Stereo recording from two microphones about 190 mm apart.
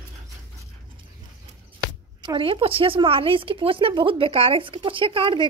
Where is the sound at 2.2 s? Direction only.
25° right (ahead or behind).